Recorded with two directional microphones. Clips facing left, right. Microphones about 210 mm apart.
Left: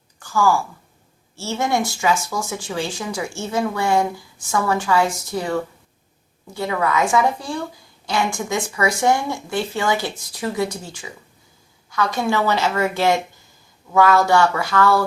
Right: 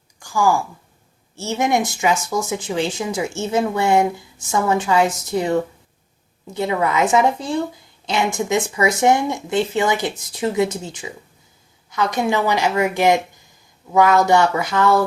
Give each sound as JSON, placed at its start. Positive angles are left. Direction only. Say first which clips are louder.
{"t": 0.2, "sound": "a woman's voice", "louder": "even", "side_deg": -15}